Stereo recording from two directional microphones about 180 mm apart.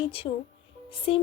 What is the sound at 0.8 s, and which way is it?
Music, 30° left (ahead or behind).